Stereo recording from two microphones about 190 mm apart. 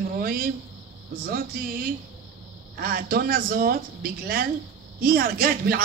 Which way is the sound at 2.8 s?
50° right (ahead or behind).